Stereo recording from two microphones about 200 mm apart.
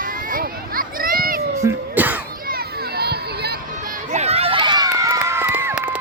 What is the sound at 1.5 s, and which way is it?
Music, 10° right (ahead or behind).